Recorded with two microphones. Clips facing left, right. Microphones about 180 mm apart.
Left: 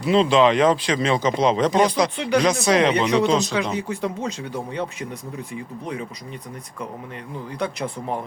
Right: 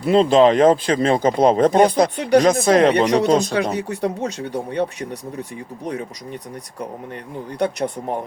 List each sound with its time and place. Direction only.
0.0 s speech: 50° right (ahead or behind)
3.8 s speech: 65° right (ahead or behind)
5.8 s speech: 40° right (ahead or behind)